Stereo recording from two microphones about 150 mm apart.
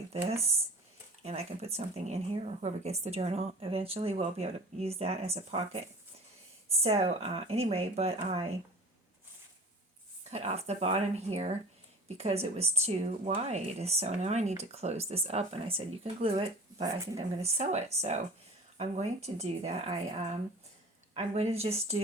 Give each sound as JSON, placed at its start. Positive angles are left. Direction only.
{"t": 0.1, "sound": "speech", "side_deg": -45}
{"t": 10.2, "sound": "speech", "side_deg": -45}
{"t": 21.1, "sound": "speech", "side_deg": -45}